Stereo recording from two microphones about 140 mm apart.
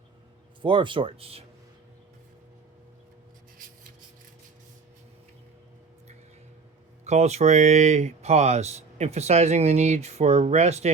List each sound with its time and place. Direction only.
0.6 s speech: 35° right (ahead or behind)
7.0 s speech: 50° right (ahead or behind)